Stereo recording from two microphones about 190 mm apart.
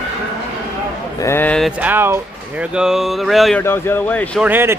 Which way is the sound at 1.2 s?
15° left (ahead or behind).